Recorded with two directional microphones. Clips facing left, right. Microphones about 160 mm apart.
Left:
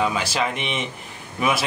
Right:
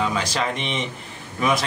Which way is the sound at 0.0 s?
5° left (ahead or behind).